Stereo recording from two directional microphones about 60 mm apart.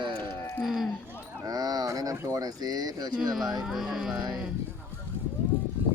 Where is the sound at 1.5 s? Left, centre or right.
Right.